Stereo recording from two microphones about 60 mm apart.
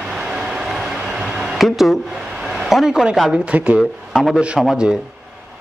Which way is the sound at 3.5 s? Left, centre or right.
Right.